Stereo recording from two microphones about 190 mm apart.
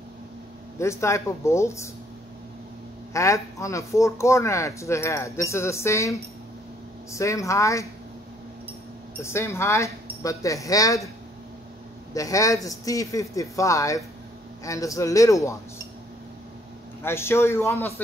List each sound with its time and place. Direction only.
0.7 s speech: 15° left (ahead or behind)
3.1 s speech: 15° left (ahead or behind)
9.2 s speech: 15° left (ahead or behind)
12.1 s speech: 20° left (ahead or behind)
17.0 s speech: 15° left (ahead or behind)